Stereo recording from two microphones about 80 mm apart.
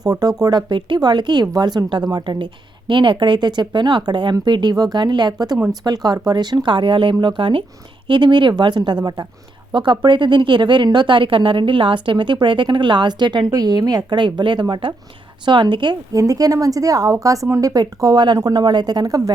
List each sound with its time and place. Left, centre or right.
0.0 s speech: right
0.7 s a woman's voice: right
2.0 s a woman's voice: right
8.0 s a woman's voice: right
9.7 s speech: right
14.2 s speech: right
15.4 s a woman's voice: right
16.1 s speech: right